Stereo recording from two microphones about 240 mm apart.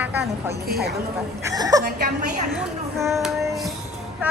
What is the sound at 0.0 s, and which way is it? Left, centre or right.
A woman's voice, centre.